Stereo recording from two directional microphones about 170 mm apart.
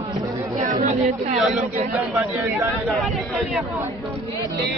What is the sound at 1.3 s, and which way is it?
Speech, centre (ahead or behind).